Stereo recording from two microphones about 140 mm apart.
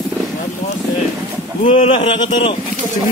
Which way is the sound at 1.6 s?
45° left (ahead or behind).